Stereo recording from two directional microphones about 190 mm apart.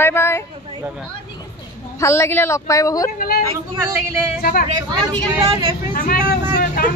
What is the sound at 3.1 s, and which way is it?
Speech, 50° left (ahead or behind).